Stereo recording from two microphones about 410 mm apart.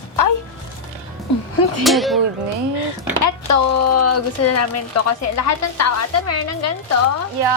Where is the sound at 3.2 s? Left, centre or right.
Left.